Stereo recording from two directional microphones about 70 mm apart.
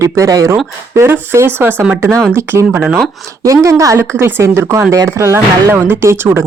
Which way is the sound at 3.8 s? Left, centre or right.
Right.